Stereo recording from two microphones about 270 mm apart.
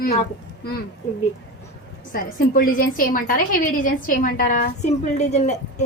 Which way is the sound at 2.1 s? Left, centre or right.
Left.